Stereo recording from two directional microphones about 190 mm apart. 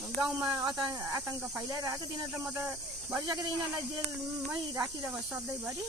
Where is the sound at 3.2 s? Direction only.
20° right (ahead or behind).